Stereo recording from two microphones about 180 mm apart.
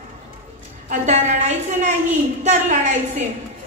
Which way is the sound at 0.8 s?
40° right (ahead or behind).